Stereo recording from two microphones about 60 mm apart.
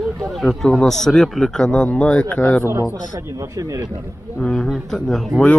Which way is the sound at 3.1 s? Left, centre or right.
Right.